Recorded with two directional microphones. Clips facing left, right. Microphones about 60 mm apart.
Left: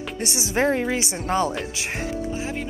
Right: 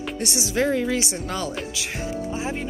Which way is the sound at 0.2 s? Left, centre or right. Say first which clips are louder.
Left 1 dB; left.